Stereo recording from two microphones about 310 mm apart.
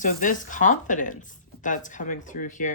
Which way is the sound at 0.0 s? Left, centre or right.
Left.